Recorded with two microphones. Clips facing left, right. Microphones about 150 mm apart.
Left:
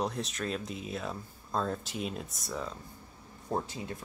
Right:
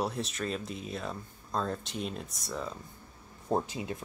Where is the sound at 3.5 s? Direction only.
20° right (ahead or behind).